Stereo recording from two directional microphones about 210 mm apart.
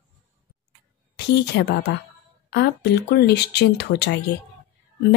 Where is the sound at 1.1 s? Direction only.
55° left (ahead or behind).